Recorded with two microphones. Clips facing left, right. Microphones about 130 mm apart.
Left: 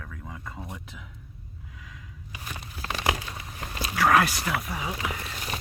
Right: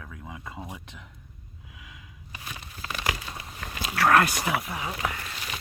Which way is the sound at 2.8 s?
35° left (ahead or behind).